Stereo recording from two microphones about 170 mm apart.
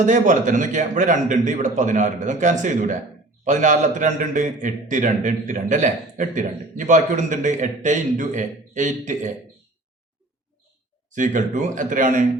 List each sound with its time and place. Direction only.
0.0 s a man's voice: 50° right (ahead or behind)
11.1 s a man's voice: 50° right (ahead or behind)